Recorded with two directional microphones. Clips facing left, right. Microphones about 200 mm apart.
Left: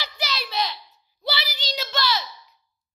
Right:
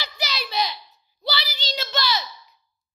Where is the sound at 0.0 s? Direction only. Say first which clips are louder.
Even; centre (ahead or behind).